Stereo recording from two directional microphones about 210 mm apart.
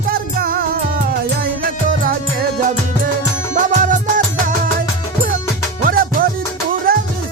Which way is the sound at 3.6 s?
35° right (ahead or behind).